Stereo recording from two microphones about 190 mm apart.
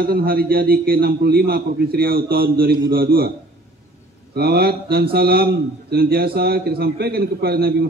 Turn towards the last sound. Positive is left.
turn(degrees=-55)  # may be behind; listen again after turning